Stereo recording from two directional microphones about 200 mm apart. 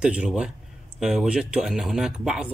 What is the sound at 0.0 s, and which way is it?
Speech, 5° right (ahead or behind).